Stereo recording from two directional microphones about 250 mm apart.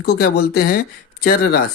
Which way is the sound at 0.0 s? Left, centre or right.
Left.